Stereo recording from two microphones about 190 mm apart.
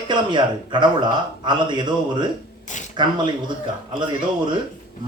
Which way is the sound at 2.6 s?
40° left (ahead or behind).